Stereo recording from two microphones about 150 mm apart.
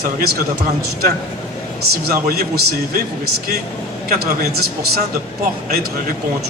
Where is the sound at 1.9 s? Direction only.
90° right.